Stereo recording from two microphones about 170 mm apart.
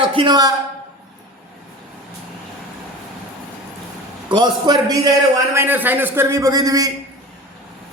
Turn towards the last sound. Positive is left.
turn(degrees=-20)  # may be behind; listen again after turning